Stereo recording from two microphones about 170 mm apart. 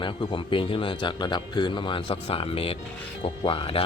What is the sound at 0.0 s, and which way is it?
Speech, 30° left (ahead or behind).